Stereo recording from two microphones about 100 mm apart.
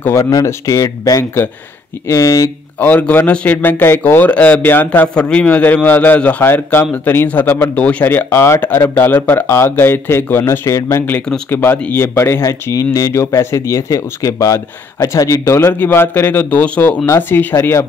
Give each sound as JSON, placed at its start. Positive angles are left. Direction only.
{"t": 0.0, "sound": "speech", "side_deg": 30}
{"t": 2.8, "sound": "a man's voice", "side_deg": 15}
{"t": 15.6, "sound": "speech", "side_deg": 20}